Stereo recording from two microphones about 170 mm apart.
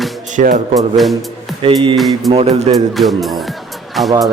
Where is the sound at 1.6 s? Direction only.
30° right (ahead or behind).